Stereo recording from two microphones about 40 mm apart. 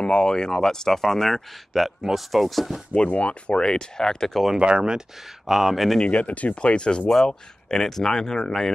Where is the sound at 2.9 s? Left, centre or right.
Left.